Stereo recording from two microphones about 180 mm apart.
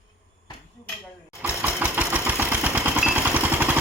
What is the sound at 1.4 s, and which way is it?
Engine, 10° right (ahead or behind).